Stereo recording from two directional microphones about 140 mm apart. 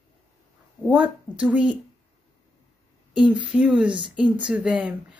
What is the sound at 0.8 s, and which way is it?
Speech, 10° right (ahead or behind).